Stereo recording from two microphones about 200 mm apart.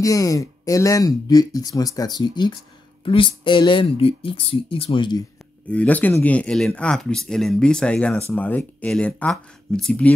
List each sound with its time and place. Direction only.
0.0 s speech: 15° left (ahead or behind)
5.7 s speech: 5° left (ahead or behind)